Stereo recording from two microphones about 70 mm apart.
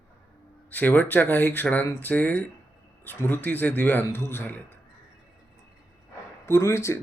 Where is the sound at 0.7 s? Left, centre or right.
Left.